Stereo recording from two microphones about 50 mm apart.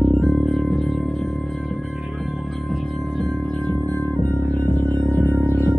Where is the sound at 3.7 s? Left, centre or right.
Left.